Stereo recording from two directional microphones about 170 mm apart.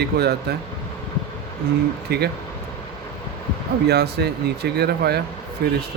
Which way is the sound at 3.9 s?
75° right (ahead or behind).